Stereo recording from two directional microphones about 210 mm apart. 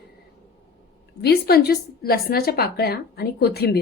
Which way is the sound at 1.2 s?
50° left (ahead or behind).